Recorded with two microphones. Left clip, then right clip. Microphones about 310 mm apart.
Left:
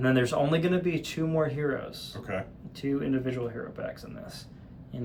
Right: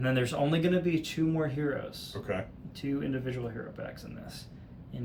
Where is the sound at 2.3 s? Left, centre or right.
Centre.